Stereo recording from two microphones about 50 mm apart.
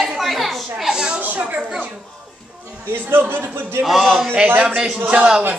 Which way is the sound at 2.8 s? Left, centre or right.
Right.